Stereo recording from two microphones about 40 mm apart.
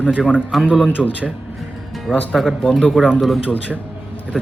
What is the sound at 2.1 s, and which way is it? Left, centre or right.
Speech, centre.